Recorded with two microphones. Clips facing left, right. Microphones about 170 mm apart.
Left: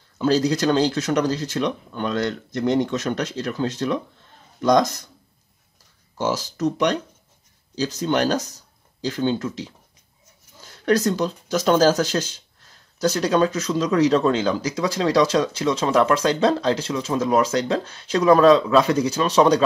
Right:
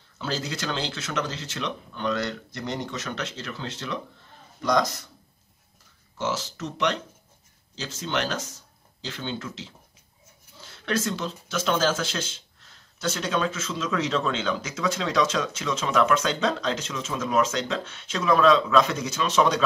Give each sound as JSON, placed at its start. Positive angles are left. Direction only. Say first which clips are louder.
{"t": 0.2, "sound": "speech", "louder": "left 12 dB", "side_deg": 40}
{"t": 6.1, "sound": "speech", "louder": "left 5 dB", "side_deg": 40}
{"t": 10.6, "sound": "speech", "louder": "left 8 dB", "side_deg": 40}